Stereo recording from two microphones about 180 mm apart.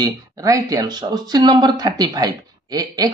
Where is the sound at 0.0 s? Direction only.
20° right (ahead or behind).